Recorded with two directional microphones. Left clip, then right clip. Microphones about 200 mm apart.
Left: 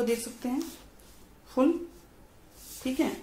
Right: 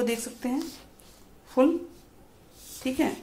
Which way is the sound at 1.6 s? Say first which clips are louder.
Right 3 dB; 20° right (ahead or behind).